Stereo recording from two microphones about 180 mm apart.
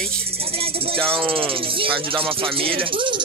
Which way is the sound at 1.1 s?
30° right (ahead or behind).